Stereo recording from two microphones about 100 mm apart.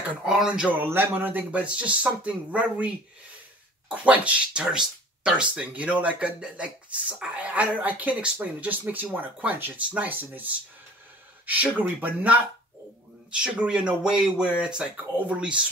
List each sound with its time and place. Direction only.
0.2 s speech: 5° right (ahead or behind)
3.9 s speech: 15° right (ahead or behind)
11.4 s speech: 15° right (ahead or behind)